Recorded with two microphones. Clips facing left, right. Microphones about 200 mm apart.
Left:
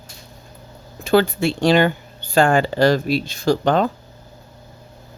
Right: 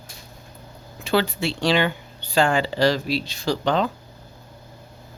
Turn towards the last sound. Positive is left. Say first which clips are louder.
# left 5 dB
turn(degrees=50)  # may be behind; listen again after turning